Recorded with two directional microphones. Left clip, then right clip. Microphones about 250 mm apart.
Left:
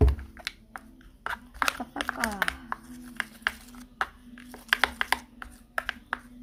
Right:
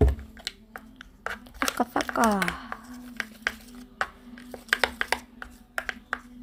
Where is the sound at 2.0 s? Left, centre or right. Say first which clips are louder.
Right 4 dB; right.